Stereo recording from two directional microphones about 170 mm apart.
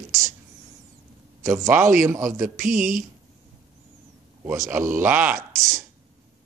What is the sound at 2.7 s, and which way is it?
Speech, 50° right (ahead or behind).